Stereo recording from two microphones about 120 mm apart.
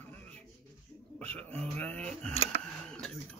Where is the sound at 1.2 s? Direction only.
10° left (ahead or behind).